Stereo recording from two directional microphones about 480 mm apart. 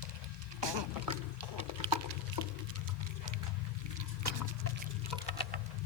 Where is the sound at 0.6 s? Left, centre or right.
Right.